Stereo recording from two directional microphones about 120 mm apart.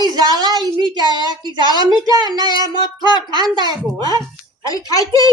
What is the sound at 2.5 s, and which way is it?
Child singing, 40° left (ahead or behind).